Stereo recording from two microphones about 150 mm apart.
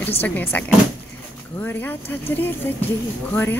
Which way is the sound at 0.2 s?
15° left (ahead or behind).